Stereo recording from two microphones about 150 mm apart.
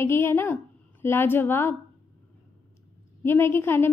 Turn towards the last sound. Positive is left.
turn(degrees=15)  # may be behind; listen again after turning